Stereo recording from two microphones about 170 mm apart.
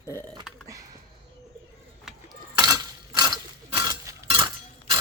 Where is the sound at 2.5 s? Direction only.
20° right (ahead or behind).